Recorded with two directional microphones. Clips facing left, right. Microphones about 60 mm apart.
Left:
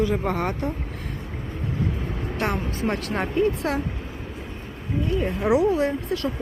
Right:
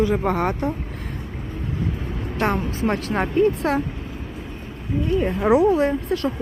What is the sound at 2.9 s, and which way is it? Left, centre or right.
Speech, right.